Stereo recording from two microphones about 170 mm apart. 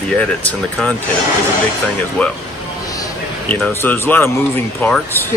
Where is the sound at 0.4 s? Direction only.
5° left (ahead or behind).